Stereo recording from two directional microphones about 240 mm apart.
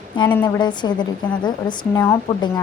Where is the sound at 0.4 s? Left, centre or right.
Centre.